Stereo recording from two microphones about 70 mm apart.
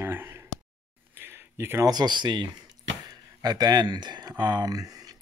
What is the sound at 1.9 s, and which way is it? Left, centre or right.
Speech, right.